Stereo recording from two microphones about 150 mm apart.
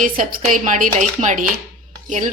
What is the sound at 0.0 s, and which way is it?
A woman's voice, 65° right (ahead or behind).